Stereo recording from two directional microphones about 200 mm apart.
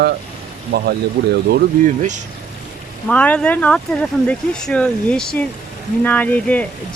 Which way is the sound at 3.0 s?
5° left (ahead or behind).